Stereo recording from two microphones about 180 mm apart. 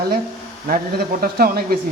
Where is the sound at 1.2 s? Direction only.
55° right (ahead or behind).